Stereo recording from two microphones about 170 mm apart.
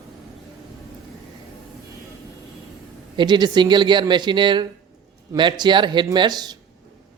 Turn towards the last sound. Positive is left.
turn(degrees=-25)  # may be behind; listen again after turning